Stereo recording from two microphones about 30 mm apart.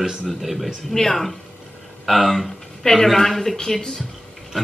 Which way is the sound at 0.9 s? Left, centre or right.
Centre.